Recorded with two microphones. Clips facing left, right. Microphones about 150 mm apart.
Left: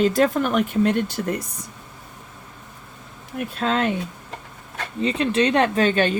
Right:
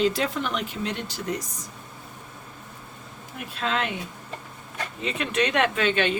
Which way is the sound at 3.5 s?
40° left (ahead or behind).